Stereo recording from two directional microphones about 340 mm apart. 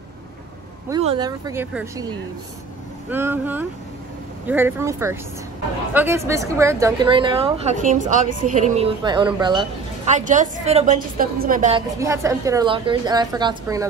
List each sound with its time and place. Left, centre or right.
0.8 s a woman's voice: centre
12.0 s a woman's voice: centre